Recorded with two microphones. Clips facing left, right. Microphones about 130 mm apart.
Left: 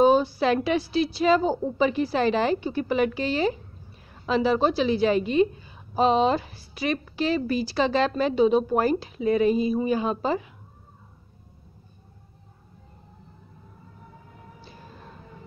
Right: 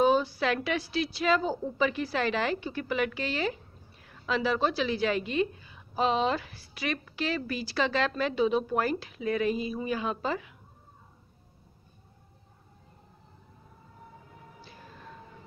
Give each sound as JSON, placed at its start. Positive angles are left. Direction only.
{"t": 0.0, "sound": "a woman's voice", "side_deg": 30}